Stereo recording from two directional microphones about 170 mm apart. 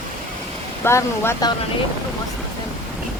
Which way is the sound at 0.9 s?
15° left (ahead or behind).